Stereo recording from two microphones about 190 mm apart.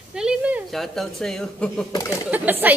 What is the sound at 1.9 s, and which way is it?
Speech, 15° left (ahead or behind).